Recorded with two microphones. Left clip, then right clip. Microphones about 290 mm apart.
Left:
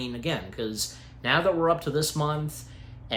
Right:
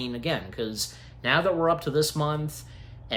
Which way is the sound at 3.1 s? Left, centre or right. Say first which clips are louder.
Even; centre.